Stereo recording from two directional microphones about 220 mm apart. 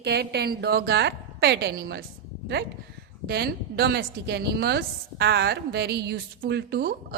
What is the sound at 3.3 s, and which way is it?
Speech, 45° right (ahead or behind).